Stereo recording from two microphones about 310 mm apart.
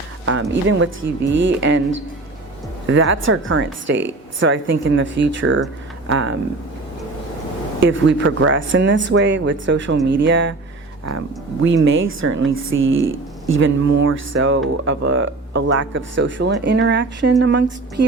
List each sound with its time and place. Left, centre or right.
0.3 s speech: right
2.8 s speech: right
7.8 s speech: right
11.6 s speech: right